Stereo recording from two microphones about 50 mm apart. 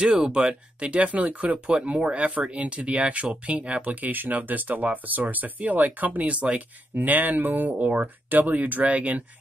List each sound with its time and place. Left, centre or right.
0.0 s speech: centre
7.0 s speech: right